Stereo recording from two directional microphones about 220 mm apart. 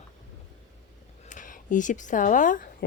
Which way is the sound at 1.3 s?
35° left (ahead or behind).